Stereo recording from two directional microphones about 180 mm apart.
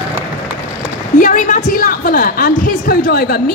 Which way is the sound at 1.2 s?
45° left (ahead or behind).